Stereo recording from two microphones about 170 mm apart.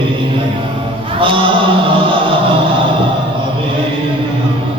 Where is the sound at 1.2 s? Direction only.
30° right (ahead or behind).